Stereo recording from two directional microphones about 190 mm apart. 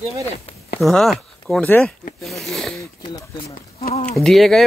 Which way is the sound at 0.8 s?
Centre (ahead or behind).